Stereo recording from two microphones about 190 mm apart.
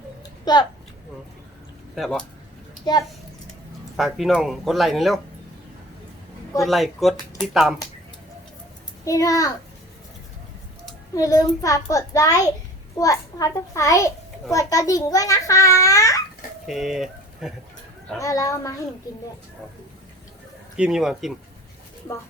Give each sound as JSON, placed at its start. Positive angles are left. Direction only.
{"t": 0.5, "sound": "speech", "side_deg": 20}
{"t": 2.0, "sound": "speech", "side_deg": 5}
{"t": 3.9, "sound": "speech", "side_deg": 0}
{"t": 6.6, "sound": "speech", "side_deg": 0}
{"t": 9.0, "sound": "a child's voice", "side_deg": 15}
{"t": 11.1, "sound": "a child's voice", "side_deg": 20}
{"t": 16.6, "sound": "speech", "side_deg": 0}
{"t": 18.2, "sound": "a child's voice", "side_deg": 15}
{"t": 20.7, "sound": "speech", "side_deg": -5}